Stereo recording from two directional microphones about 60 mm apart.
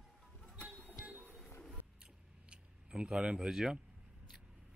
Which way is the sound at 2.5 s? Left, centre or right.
Centre.